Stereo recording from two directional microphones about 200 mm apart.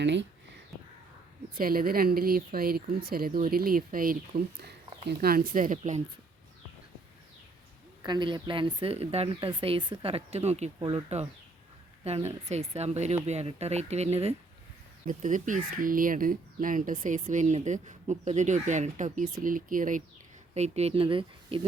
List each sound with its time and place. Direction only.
0.0 s speech: 60° right (ahead or behind)
1.5 s speech: 45° right (ahead or behind)
8.0 s speech: 20° right (ahead or behind)